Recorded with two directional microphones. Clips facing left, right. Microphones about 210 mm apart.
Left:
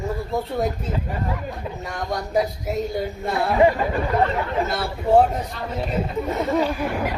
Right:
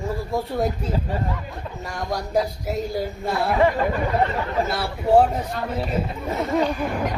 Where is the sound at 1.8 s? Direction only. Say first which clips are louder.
Right 1 dB; centre (ahead or behind).